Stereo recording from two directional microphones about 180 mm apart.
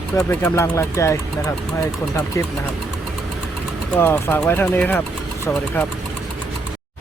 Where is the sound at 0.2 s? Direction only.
15° left (ahead or behind).